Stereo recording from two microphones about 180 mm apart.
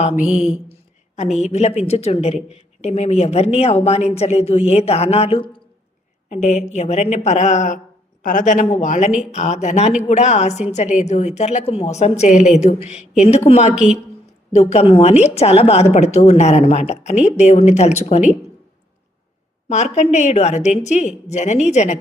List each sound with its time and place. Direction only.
0.2 s mantra: 5° right (ahead or behind)
0.7 s a woman's voice: 40° left (ahead or behind)
13.7 s mantra: 5° right (ahead or behind)
14.5 s speech: 35° left (ahead or behind)
19.6 s speech: 40° left (ahead or behind)